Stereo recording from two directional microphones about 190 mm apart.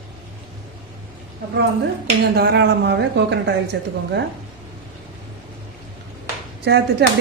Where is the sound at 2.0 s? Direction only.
60° right (ahead or behind).